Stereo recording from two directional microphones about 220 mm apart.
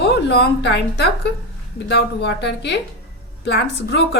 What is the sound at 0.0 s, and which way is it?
A woman's voice, 50° left (ahead or behind).